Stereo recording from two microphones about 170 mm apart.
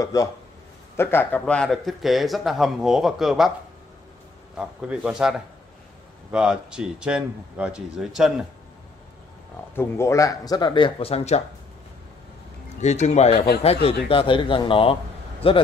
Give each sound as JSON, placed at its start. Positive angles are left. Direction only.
{"t": 0.0, "sound": "speech", "side_deg": 20}
{"t": 4.6, "sound": "speech", "side_deg": -5}
{"t": 6.3, "sound": "speech", "side_deg": -5}
{"t": 9.8, "sound": "speech", "side_deg": 15}
{"t": 12.8, "sound": "speech", "side_deg": 40}